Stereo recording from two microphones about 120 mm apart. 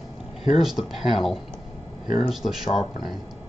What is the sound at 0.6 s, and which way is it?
Speech, 5° right (ahead or behind).